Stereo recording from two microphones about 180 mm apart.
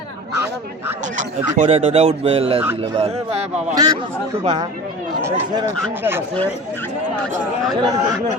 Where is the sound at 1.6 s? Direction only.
35° right (ahead or behind).